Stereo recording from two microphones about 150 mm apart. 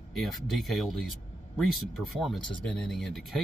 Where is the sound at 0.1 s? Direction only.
Centre (ahead or behind).